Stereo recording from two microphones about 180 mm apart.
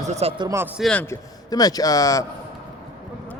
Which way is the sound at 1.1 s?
20° left (ahead or behind).